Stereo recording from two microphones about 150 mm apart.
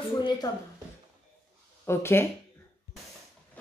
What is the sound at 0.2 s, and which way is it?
Speech, 30° left (ahead or behind).